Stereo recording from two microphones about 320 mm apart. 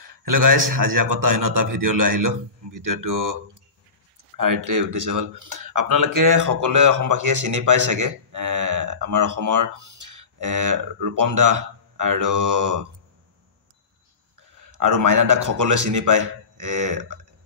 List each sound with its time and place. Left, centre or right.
0.0 s a man's voice: right
4.4 s speech: right
14.6 s speech: right